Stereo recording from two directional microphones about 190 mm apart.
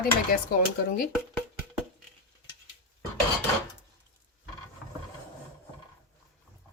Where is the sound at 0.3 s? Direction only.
50° left (ahead or behind).